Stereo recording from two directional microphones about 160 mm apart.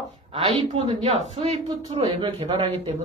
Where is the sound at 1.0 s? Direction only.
40° right (ahead or behind).